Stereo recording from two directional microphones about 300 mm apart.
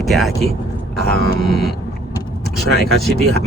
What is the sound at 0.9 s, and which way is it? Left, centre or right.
Music, left.